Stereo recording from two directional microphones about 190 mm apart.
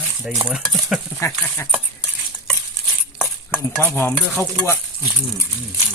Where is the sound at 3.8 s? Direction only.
10° left (ahead or behind).